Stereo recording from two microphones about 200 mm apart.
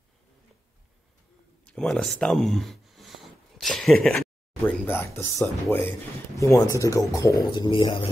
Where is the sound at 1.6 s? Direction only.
5° left (ahead or behind).